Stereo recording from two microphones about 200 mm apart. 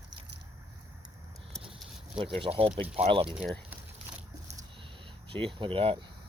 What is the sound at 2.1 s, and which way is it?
Speech, 25° right (ahead or behind).